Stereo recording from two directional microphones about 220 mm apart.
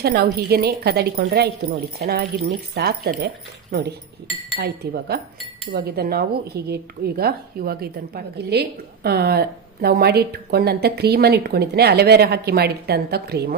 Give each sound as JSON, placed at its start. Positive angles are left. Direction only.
{"t": 0.0, "sound": "a woman's voice", "side_deg": -45}